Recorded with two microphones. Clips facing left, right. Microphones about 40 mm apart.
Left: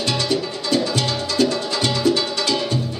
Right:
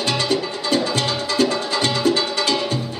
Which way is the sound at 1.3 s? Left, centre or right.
Right.